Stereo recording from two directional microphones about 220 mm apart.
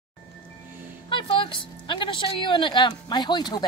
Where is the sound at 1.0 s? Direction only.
25° left (ahead or behind).